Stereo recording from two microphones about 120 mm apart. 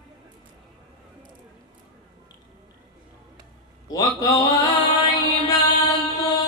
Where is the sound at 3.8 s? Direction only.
30° left (ahead or behind).